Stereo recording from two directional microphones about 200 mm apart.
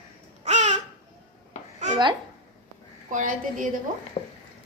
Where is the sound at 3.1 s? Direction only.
40° right (ahead or behind).